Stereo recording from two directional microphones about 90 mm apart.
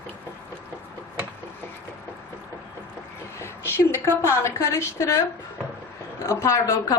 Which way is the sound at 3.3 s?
30° left (ahead or behind).